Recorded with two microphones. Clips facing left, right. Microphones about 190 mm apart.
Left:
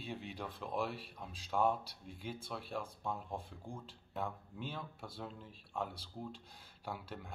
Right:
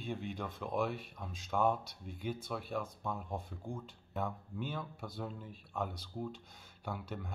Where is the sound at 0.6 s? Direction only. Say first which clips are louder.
Right 4 dB; centre (ahead or behind).